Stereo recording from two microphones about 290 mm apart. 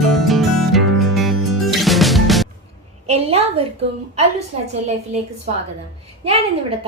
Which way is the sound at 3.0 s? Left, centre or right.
Right.